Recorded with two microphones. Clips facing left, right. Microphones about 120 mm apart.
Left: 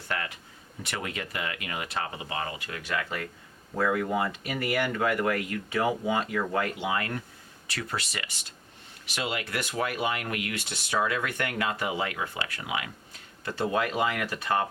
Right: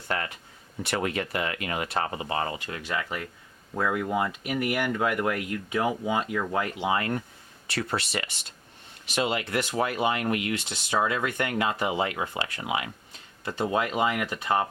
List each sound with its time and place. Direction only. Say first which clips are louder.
0.9 s speech: right 6 dB; 40° right (ahead or behind)
3.8 s speech: even; 15° right (ahead or behind)
6.6 s speech: right 2 dB; 25° right (ahead or behind)